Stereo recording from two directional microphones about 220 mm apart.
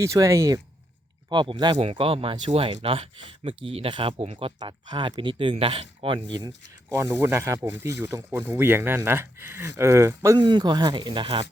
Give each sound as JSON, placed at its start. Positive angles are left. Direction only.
{"t": 0.0, "sound": "speech", "side_deg": -15}